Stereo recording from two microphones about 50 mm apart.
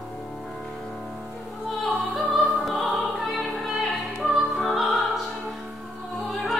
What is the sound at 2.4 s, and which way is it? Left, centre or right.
Music, centre.